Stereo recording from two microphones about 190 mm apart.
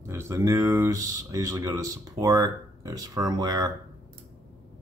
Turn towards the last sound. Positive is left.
turn(degrees=-20)  # may be behind; listen again after turning